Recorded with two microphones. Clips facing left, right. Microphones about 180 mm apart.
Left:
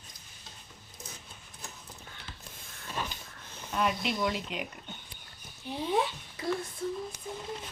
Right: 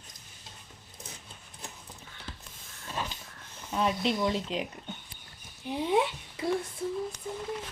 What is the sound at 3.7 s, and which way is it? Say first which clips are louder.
Speech: right 2 dB; 25° right (ahead or behind).